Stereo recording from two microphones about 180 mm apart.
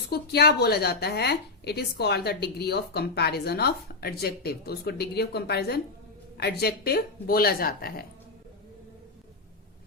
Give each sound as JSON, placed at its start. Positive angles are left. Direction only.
{"t": 0.1, "sound": "a woman's voice", "side_deg": 60}